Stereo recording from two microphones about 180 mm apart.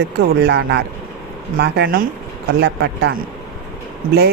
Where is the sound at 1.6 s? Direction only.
60° right (ahead or behind).